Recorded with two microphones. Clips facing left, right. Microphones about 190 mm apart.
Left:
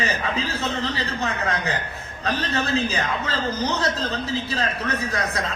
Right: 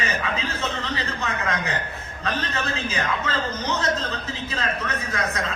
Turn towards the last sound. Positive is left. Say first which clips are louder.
# left 1 dB
turn(degrees=35)  # may be behind; listen again after turning